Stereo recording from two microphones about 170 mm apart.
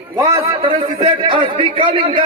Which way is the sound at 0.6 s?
35° right (ahead or behind).